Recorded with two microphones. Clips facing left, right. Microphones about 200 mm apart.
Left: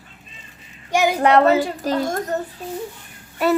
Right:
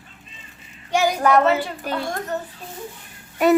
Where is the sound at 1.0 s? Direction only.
30° left (ahead or behind).